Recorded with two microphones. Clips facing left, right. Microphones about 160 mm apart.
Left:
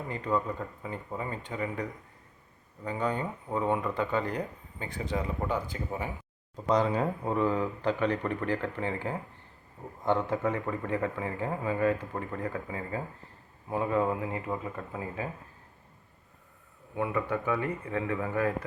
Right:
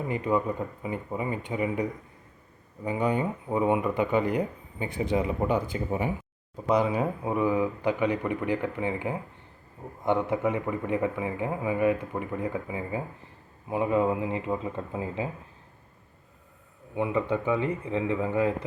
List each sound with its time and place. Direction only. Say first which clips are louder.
0.1 s speech: right 3 dB; 15° right (ahead or behind)
16.9 s speech: right 3 dB; 20° right (ahead or behind)